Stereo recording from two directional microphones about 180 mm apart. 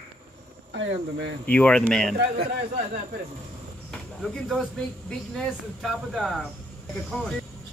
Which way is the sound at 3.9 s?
5° left (ahead or behind).